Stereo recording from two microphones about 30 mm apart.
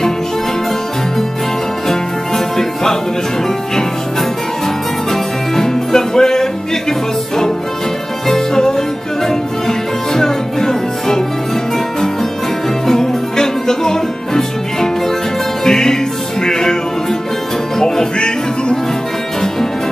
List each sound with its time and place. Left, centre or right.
1.9 s music: centre
5.1 s music: centre
12.8 s music: centre
17.7 s music: centre